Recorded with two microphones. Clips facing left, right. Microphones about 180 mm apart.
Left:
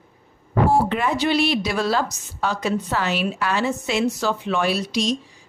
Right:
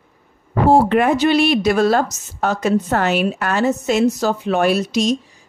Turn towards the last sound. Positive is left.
turn(degrees=-45)  # may be behind; listen again after turning